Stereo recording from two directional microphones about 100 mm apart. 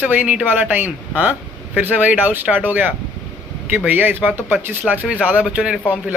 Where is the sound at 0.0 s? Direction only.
15° right (ahead or behind).